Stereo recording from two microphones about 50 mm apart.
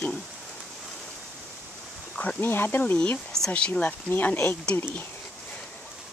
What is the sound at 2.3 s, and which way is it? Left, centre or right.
Speech, left.